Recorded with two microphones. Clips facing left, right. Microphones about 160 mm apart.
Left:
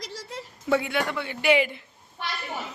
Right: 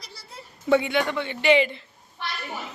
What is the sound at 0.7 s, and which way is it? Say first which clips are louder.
A man's voice: right 3 dB; centre (ahead or behind).